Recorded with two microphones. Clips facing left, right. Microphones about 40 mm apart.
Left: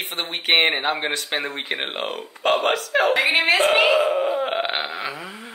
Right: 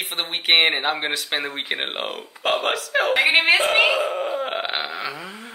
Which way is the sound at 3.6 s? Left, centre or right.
Centre.